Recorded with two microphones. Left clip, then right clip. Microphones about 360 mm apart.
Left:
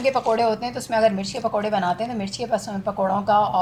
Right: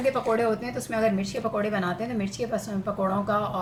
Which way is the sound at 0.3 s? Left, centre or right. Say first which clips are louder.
Left 4 dB; left.